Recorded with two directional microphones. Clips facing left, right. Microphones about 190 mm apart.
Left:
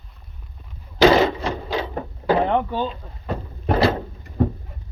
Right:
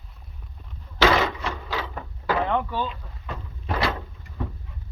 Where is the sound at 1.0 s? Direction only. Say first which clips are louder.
Left 6 dB; 30° left (ahead or behind).